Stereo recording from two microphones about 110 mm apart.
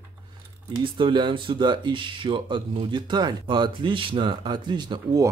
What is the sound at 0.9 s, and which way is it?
Speech, 45° right (ahead or behind).